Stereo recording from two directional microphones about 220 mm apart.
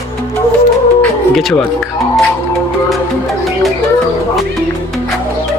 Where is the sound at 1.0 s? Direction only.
Centre (ahead or behind).